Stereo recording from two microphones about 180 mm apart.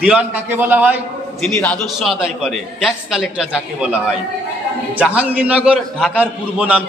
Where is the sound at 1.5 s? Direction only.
5° left (ahead or behind).